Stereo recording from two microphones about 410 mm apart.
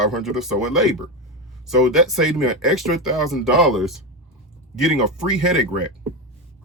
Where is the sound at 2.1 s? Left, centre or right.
Centre.